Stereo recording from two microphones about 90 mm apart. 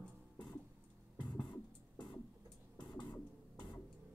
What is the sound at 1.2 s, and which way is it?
Music, 55° left (ahead or behind).